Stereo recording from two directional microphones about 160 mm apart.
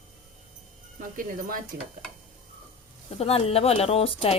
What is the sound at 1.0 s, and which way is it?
Speech, 60° right (ahead or behind).